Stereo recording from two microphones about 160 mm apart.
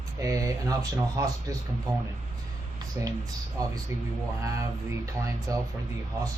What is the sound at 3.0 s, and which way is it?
Speech, 15° right (ahead or behind).